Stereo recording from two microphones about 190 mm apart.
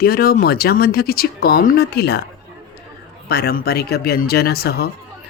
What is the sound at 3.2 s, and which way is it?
Speech, 55° left (ahead or behind).